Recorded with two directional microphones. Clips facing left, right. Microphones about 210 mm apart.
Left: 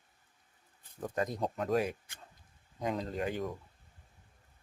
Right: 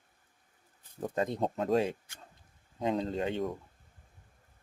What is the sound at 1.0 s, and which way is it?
Speech, 25° right (ahead or behind).